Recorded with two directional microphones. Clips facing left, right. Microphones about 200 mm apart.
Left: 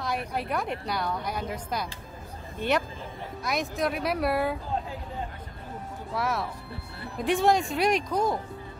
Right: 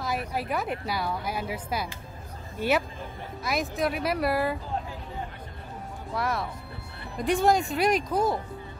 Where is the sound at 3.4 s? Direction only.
Centre (ahead or behind).